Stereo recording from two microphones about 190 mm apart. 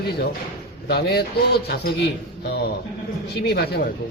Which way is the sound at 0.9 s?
60° left (ahead or behind).